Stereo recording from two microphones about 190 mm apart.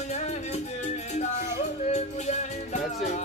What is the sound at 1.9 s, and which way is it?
Music, 40° left (ahead or behind).